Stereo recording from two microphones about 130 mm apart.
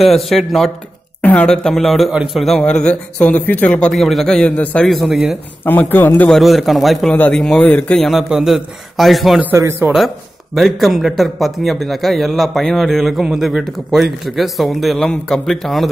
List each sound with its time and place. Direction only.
0.0 s speech: centre (ahead or behind)
5.7 s a man's voice: 15° left (ahead or behind)
6.3 s speech: centre (ahead or behind)
7.1 s speech: 10° left (ahead or behind)
9.6 s speech: 20° right (ahead or behind)
9.9 s speech: centre (ahead or behind)